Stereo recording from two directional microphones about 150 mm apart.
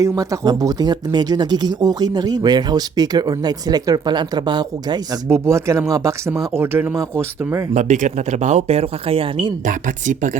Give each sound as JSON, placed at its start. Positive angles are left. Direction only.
{"t": 0.0, "sound": "speech", "side_deg": -20}
{"t": 5.3, "sound": "speech", "side_deg": -20}
{"t": 7.7, "sound": "speech", "side_deg": -50}
{"t": 9.6, "sound": "speech", "side_deg": -60}